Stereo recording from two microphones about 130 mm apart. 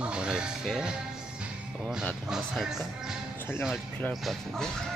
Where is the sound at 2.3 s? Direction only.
5° right (ahead or behind).